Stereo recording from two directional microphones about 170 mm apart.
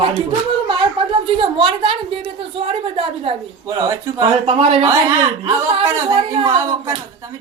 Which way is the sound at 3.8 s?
20° right (ahead or behind).